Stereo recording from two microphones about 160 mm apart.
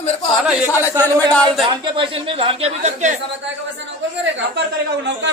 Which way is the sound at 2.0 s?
35° right (ahead or behind).